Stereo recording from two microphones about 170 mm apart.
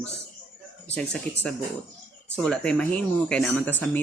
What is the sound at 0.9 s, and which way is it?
Speech, 5° left (ahead or behind).